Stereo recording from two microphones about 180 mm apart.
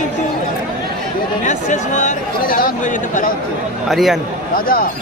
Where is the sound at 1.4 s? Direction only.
40° left (ahead or behind).